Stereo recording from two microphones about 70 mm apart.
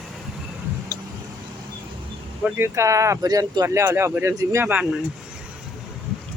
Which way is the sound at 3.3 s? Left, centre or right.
Right.